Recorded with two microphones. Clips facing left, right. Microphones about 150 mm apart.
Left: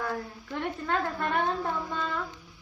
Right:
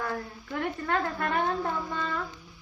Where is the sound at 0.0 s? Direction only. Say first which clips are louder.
Even; centre (ahead or behind).